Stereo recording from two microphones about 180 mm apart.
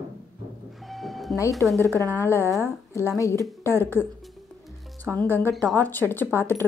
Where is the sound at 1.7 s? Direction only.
15° right (ahead or behind).